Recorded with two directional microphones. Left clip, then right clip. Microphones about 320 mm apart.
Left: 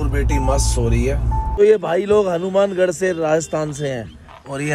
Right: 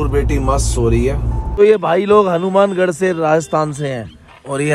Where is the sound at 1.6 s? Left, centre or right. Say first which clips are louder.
Right 3 dB; centre.